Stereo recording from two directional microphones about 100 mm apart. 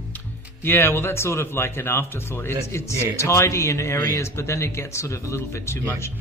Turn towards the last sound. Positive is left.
turn(degrees=25)  # may be behind; listen again after turning